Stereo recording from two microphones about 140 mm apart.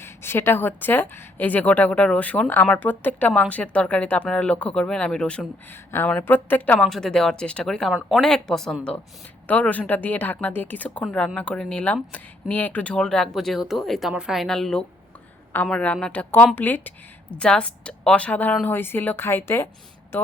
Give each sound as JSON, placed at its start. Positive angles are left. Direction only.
{"t": 0.0, "sound": "a woman's voice", "side_deg": 15}